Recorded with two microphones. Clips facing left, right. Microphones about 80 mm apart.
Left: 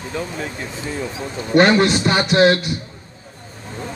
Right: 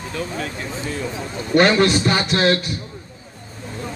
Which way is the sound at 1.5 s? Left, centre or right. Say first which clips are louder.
Left 1 dB; left.